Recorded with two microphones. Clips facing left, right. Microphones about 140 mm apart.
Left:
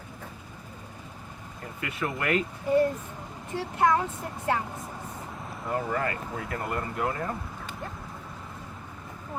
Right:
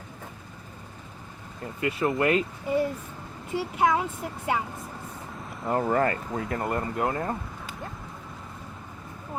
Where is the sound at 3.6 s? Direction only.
10° right (ahead or behind).